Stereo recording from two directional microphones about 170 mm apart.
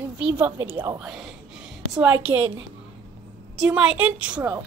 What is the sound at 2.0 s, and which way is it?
Speech, 10° right (ahead or behind).